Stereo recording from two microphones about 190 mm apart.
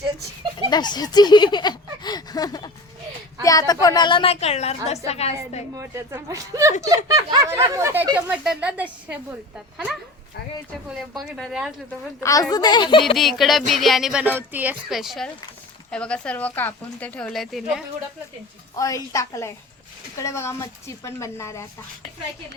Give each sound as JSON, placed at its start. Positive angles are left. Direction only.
{"t": 0.7, "sound": "a woman's voice", "side_deg": 20}
{"t": 5.7, "sound": "a woman's voice", "side_deg": -15}
{"t": 10.8, "sound": "speech", "side_deg": 0}
{"t": 12.2, "sound": "speech", "side_deg": 20}
{"t": 13.1, "sound": "speech", "side_deg": 0}
{"t": 18.8, "sound": "speech", "side_deg": 15}